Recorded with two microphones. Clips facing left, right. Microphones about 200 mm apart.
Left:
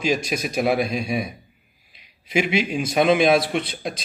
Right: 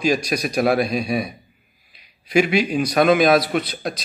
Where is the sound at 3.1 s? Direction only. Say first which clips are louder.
Right 2 dB; 25° left (ahead or behind).